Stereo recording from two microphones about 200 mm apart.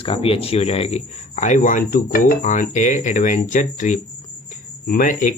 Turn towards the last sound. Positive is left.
turn(degrees=40)  # may be behind; listen again after turning